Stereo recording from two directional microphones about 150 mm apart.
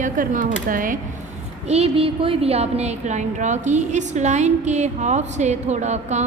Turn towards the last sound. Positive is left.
turn(degrees=-50)  # may be behind; listen again after turning